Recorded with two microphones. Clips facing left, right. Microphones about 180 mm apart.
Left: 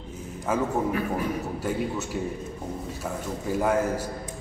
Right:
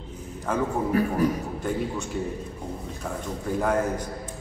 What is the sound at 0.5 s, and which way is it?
Speech, 5° left (ahead or behind).